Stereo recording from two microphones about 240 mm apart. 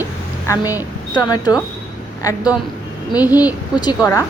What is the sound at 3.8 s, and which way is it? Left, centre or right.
Speech, centre.